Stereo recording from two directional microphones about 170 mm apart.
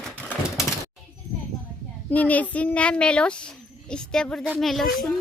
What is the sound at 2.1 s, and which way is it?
A child's voice, 10° left (ahead or behind).